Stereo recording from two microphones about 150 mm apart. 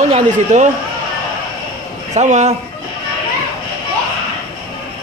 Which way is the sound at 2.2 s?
50° right (ahead or behind).